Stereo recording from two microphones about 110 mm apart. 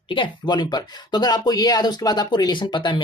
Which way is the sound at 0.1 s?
45° left (ahead or behind).